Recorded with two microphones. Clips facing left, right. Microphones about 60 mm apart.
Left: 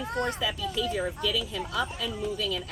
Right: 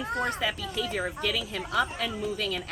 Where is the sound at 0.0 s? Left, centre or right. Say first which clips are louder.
Even; centre.